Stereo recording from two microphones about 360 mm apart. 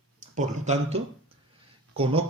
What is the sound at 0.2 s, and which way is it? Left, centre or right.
A man's voice, centre.